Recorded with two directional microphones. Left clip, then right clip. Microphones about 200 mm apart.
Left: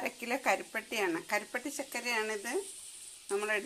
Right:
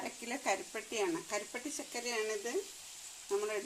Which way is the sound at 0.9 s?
15° left (ahead or behind).